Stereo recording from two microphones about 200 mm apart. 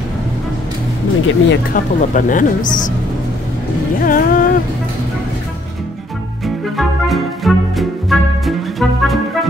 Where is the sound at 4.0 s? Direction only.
45° left (ahead or behind).